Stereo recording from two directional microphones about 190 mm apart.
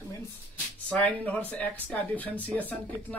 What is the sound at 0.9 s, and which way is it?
Speech, 5° left (ahead or behind).